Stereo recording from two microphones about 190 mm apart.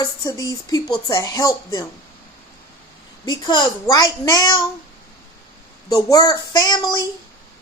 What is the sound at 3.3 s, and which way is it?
Speech, 25° left (ahead or behind).